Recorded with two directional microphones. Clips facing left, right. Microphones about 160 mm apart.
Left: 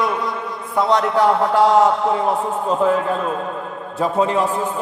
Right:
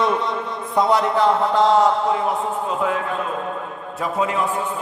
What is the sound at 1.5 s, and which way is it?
Speech, 10° left (ahead or behind).